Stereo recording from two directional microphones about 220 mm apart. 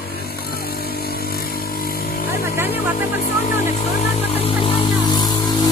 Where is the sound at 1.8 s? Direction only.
40° left (ahead or behind).